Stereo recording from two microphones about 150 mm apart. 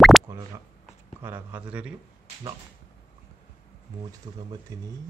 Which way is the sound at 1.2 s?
15° right (ahead or behind).